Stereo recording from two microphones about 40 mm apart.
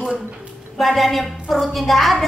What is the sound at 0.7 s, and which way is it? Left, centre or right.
Speech, centre.